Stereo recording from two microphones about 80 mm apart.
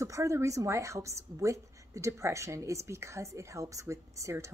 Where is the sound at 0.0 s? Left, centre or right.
Right.